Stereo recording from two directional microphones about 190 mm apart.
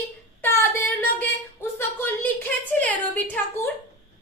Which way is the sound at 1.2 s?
10° left (ahead or behind).